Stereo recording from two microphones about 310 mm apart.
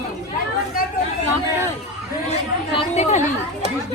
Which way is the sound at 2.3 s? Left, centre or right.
Centre.